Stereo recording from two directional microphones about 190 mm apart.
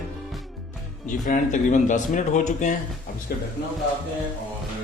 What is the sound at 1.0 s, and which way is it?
A man's voice, 45° left (ahead or behind).